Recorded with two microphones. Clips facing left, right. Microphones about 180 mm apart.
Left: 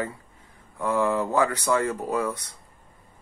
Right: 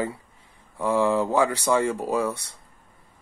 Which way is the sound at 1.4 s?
10° right (ahead or behind).